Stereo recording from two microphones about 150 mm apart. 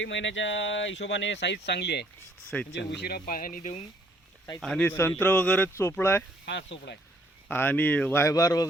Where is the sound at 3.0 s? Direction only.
85° left; by 3.8 s 55° left (ahead or behind).